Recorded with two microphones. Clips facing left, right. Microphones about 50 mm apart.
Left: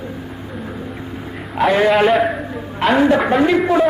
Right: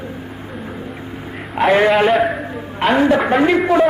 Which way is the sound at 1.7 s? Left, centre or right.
Right.